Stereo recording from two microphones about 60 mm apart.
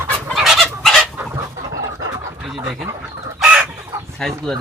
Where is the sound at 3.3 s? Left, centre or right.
Centre.